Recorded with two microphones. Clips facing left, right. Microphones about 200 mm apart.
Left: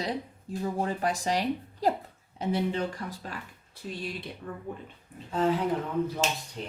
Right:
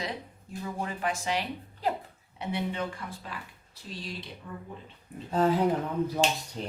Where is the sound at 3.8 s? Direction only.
60° left (ahead or behind).